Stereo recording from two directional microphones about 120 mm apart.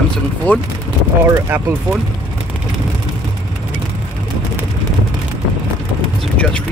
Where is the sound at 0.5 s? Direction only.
15° left (ahead or behind).